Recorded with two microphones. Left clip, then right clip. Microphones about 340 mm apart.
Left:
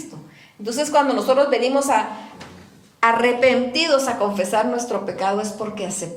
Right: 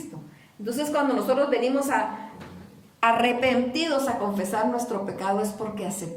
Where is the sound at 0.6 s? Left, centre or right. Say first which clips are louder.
Left 7 dB; centre.